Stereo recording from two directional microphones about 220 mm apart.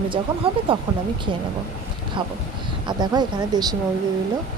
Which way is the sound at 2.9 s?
20° right (ahead or behind).